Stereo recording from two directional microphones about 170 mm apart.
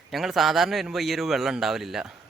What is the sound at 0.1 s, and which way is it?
Speech, centre (ahead or behind).